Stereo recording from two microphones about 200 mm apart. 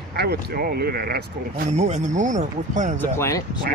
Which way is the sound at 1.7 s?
35° right (ahead or behind).